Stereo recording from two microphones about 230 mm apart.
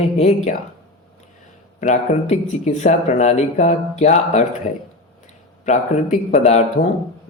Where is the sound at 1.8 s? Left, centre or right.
Left.